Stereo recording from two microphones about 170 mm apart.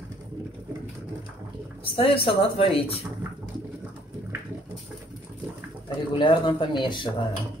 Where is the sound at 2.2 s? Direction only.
35° left (ahead or behind).